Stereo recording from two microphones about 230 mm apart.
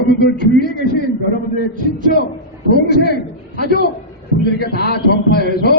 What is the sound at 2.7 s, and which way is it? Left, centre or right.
A man's voice, left.